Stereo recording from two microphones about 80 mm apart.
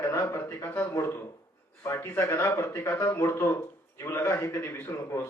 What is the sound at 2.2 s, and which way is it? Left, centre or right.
A man's voice, left.